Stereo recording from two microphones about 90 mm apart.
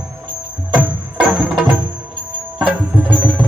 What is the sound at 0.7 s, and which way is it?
Music, 10° right (ahead or behind).